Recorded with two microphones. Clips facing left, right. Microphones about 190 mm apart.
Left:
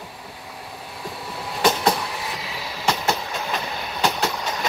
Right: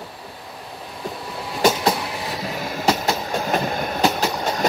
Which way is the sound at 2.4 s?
50° right (ahead or behind).